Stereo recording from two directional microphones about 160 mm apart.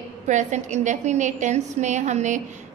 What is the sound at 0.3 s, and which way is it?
A woman's voice, 50° right (ahead or behind).